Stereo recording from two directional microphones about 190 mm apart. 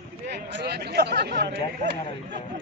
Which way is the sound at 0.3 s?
60° right (ahead or behind).